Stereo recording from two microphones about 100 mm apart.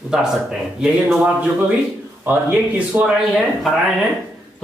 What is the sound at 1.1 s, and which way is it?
A man's voice, 15° right (ahead or behind).